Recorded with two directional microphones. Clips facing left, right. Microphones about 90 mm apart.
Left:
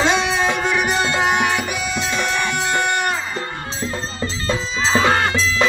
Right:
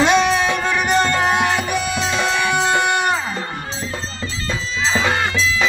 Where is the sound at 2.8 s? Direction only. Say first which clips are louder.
Right 2 dB; 20° right (ahead or behind).